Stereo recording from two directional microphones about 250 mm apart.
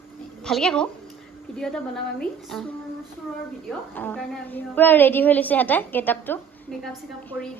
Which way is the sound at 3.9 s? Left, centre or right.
Centre.